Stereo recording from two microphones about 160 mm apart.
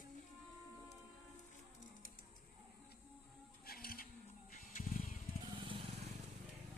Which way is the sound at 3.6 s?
65° left (ahead or behind).